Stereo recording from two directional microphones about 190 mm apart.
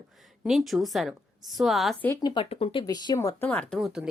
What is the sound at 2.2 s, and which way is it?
Speech, 25° left (ahead or behind).